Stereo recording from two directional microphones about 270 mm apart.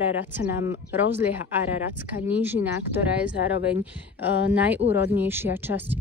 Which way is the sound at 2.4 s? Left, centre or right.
Centre.